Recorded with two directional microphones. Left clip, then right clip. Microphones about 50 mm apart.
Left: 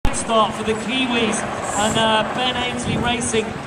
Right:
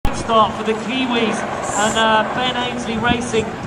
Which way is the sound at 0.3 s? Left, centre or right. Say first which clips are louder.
Right 3 dB; left.